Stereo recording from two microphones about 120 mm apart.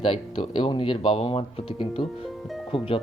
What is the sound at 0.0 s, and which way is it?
Speech, 45° left (ahead or behind).